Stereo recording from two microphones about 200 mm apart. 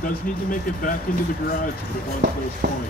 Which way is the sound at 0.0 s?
45° left (ahead or behind).